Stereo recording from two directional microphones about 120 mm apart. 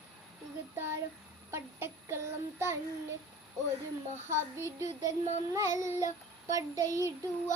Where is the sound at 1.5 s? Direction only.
20° right (ahead or behind).